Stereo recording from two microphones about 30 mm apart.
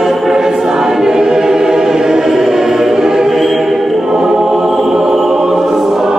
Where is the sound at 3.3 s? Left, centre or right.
Centre.